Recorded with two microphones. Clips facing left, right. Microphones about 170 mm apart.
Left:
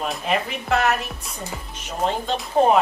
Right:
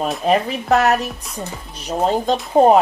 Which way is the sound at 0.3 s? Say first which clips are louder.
Right 7 dB; 40° right (ahead or behind).